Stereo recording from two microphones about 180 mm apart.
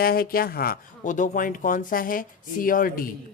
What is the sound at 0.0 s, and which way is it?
Speech, 55° left (ahead or behind).